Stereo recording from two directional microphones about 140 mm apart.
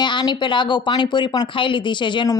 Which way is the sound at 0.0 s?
35° left (ahead or behind).